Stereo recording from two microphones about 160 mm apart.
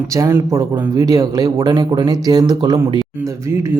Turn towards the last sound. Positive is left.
turn(degrees=-15)  # may be behind; listen again after turning